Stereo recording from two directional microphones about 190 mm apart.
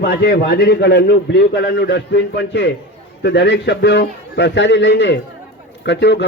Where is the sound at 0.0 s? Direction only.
65° left (ahead or behind).